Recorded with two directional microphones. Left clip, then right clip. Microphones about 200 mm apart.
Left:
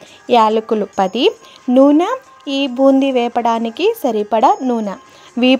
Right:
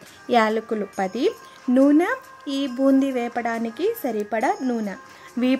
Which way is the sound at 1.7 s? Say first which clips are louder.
Left 7 dB; 10° left (ahead or behind).